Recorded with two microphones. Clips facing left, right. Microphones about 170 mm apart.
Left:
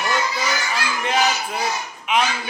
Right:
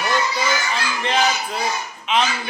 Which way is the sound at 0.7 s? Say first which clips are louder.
Even; 10° left (ahead or behind).